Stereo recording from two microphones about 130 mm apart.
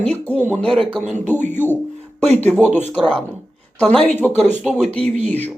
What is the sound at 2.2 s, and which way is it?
Speech, 55° right (ahead or behind).